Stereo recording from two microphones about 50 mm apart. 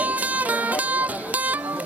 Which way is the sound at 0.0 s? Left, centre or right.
Right.